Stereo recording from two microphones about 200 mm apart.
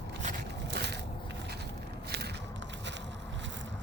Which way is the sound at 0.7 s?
55° right (ahead or behind).